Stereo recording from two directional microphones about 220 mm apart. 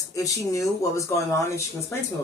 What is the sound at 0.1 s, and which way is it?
A woman's voice, 15° left (ahead or behind).